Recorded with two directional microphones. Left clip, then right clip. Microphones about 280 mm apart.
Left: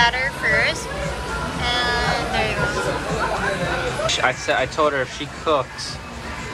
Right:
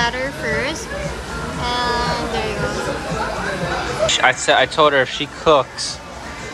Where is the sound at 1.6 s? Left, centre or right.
Centre.